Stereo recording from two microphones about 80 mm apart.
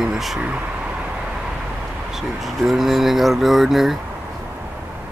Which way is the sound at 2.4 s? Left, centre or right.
Centre.